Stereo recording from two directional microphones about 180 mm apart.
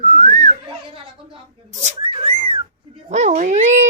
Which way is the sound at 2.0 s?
30° right (ahead or behind).